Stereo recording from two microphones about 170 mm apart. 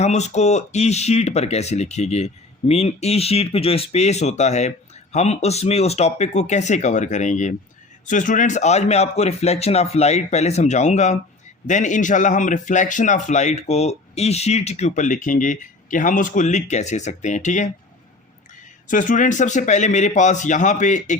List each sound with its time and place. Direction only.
0.0 s a man's voice: 40° left (ahead or behind)
18.9 s a man's voice: 50° left (ahead or behind)